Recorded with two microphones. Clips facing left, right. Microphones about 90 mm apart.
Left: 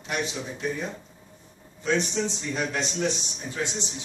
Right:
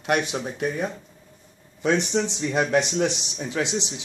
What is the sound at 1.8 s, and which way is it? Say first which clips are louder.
A man's voice: right 4 dB; 75° right (ahead or behind).